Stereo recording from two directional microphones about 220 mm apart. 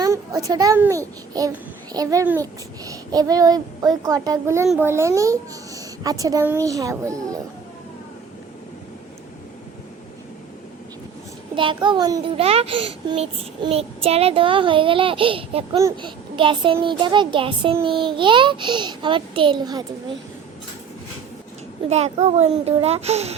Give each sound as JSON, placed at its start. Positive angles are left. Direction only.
{"t": 0.0, "sound": "a child's voice", "side_deg": -15}
{"t": 11.5, "sound": "a child's voice", "side_deg": -20}
{"t": 21.8, "sound": "a child's voice", "side_deg": -30}